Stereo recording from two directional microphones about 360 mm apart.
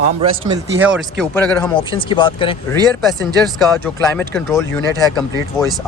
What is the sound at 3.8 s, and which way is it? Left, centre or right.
Speech, centre.